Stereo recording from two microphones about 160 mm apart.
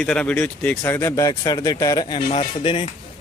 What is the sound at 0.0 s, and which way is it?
A man's voice, 5° left (ahead or behind).